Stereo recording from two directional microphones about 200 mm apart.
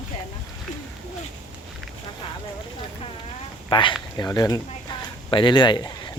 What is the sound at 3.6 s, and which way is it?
Speech, 25° left (ahead or behind).